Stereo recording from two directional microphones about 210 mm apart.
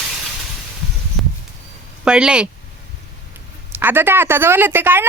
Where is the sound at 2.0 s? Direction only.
5° right (ahead or behind).